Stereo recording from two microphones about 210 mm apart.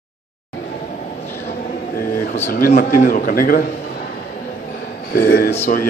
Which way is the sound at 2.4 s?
45° left (ahead or behind).